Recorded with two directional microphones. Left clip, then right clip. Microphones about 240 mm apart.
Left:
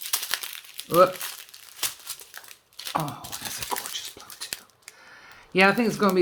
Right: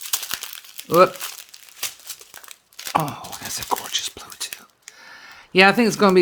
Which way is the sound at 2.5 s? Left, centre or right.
Right.